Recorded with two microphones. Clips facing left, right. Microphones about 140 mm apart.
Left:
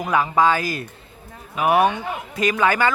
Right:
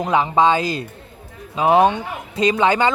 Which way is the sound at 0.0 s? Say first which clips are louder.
Right 2 dB; 25° right (ahead or behind).